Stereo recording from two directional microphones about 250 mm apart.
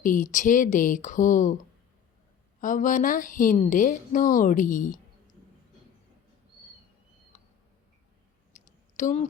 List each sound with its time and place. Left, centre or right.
0.0 s a woman's voice: left
8.5 s clicking: left